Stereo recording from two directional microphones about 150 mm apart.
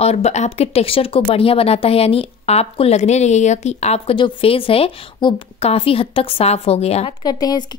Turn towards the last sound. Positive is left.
turn(degrees=25)  # may be behind; listen again after turning